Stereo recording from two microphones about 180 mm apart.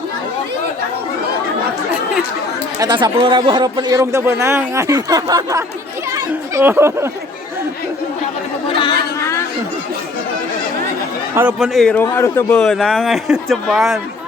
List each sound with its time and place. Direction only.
2.7 s speech: 20° right (ahead or behind)
8.8 s chatter: 20° left (ahead or behind)
11.3 s speech: 5° right (ahead or behind); by 12.5 s 15° left (ahead or behind)
12.5 s speech: centre (ahead or behind)